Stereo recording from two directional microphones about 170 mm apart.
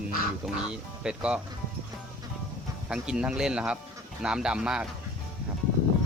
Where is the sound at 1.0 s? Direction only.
5° right (ahead or behind).